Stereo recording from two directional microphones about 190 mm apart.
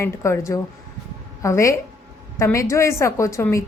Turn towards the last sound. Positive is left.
turn(degrees=15)  # may be behind; listen again after turning